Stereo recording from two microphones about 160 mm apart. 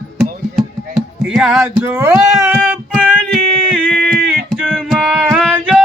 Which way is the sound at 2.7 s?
5° right (ahead or behind).